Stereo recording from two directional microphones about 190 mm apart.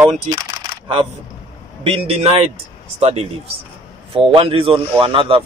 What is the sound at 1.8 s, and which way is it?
Speech, 30° right (ahead or behind).